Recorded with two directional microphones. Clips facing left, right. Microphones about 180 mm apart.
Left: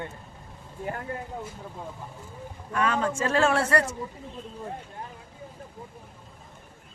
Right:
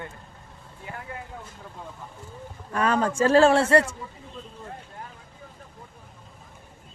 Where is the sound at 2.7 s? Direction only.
40° right (ahead or behind).